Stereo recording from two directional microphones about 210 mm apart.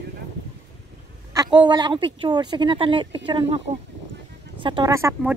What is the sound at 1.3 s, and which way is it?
Speech, 20° right (ahead or behind).